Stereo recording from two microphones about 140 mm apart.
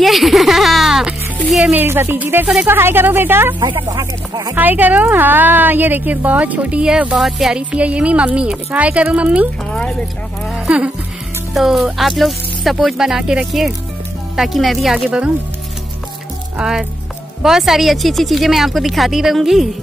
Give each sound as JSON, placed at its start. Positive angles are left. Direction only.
{"t": 0.0, "sound": "a sound", "side_deg": 0}
{"t": 1.5, "sound": "a woman's voice", "side_deg": -10}
{"t": 3.5, "sound": "speech", "side_deg": -35}
{"t": 4.6, "sound": "a woman's voice", "side_deg": -10}
{"t": 9.7, "sound": "a woman's voice", "side_deg": 5}
{"t": 10.5, "sound": "a woman's voice", "side_deg": -10}
{"t": 16.5, "sound": "a woman's voice", "side_deg": -5}